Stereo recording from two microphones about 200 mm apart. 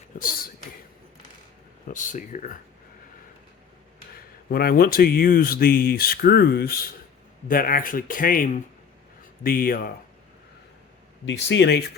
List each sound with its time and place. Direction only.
0.2 s a sound: 45° left (ahead or behind)
1.9 s speech: 40° left (ahead or behind)
4.4 s speech: 50° left (ahead or behind)
11.4 s speech: 60° left (ahead or behind)